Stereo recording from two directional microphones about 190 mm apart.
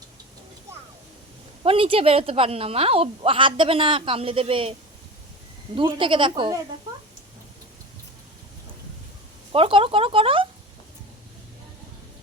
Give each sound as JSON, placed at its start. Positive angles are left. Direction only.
{"t": 1.6, "sound": "a woman's voice", "side_deg": -30}
{"t": 5.7, "sound": "a woman's voice", "side_deg": -25}
{"t": 9.5, "sound": "a woman's voice", "side_deg": -30}